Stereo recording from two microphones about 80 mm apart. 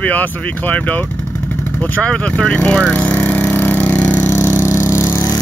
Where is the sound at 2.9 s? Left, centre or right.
Left.